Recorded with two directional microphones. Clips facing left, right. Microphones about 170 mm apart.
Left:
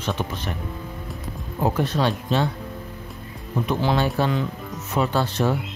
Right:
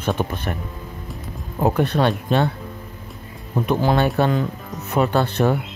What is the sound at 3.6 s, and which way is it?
Speech, 55° right (ahead or behind).